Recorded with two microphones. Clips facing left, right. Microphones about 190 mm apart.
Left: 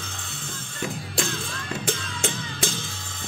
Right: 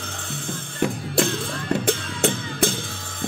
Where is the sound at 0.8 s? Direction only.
60° right (ahead or behind).